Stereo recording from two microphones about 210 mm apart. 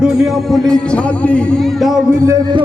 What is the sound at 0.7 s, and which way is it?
A man's voice, 5° left (ahead or behind).